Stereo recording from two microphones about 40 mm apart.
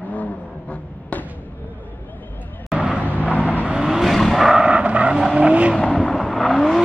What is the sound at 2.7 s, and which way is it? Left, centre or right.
Vehicle, centre.